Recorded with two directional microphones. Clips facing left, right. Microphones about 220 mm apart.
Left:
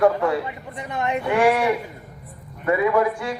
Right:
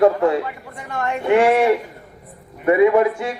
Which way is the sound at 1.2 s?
25° right (ahead or behind).